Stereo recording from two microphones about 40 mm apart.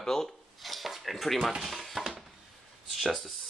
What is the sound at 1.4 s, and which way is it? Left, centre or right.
Speech, centre.